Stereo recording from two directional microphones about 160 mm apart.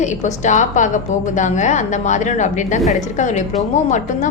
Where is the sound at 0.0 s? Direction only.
50° left (ahead or behind).